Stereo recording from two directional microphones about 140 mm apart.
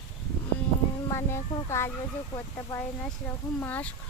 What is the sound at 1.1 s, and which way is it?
Speech, 20° left (ahead or behind).